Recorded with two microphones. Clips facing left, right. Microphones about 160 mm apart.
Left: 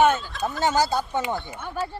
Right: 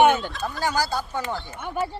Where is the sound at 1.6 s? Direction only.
10° right (ahead or behind).